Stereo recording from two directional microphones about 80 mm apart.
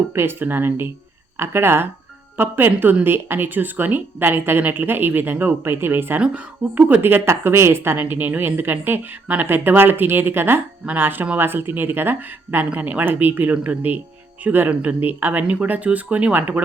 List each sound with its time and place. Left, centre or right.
0.1 s speech: right